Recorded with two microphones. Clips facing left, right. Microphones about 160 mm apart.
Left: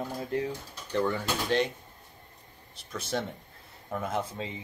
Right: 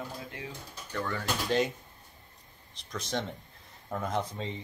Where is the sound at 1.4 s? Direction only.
Centre (ahead or behind).